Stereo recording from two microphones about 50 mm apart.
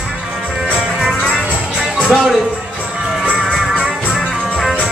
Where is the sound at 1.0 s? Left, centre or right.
Centre.